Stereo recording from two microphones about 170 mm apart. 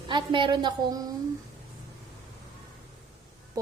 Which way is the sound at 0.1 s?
25° right (ahead or behind).